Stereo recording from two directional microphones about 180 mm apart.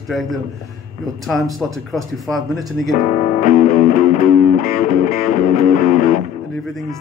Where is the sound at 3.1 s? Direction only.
40° left (ahead or behind).